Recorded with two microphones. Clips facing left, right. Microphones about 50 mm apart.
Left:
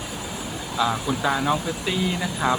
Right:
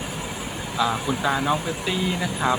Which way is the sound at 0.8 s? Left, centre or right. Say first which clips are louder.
Even; centre.